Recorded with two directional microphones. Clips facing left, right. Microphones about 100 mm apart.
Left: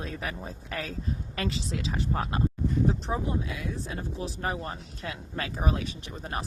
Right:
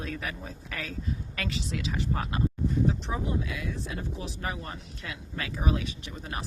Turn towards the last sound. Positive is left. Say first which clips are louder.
# left 2 dB
turn(degrees=35)  # may be behind; listen again after turning